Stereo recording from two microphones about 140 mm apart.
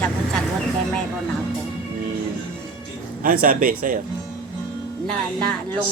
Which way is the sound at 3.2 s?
90° right.